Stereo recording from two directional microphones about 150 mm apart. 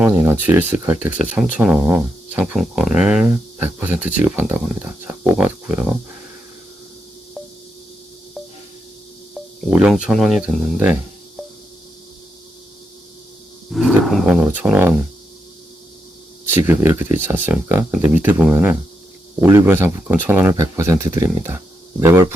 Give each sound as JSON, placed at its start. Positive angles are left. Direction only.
{"t": 0.1, "sound": "speech", "side_deg": -15}
{"t": 9.3, "sound": "speech", "side_deg": -5}
{"t": 13.7, "sound": "speech", "side_deg": 0}
{"t": 14.3, "sound": "speech", "side_deg": -10}
{"t": 16.6, "sound": "speech", "side_deg": -15}